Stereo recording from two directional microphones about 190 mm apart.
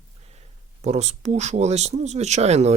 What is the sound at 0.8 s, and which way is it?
Speech, 35° right (ahead or behind).